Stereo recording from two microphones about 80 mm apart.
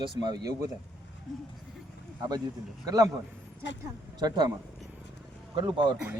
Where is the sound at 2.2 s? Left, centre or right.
Right.